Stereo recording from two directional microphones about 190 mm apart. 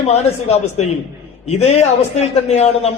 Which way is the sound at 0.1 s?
35° left (ahead or behind).